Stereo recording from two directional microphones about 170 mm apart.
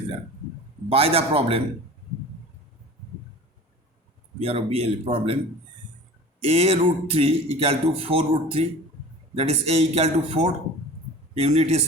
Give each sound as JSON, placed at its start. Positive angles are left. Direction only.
{"t": 0.9, "sound": "speech", "side_deg": -35}
{"t": 4.4, "sound": "speech", "side_deg": -35}
{"t": 6.4, "sound": "speech", "side_deg": -35}